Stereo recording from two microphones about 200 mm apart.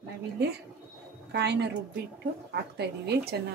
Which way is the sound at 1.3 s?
55° right (ahead or behind).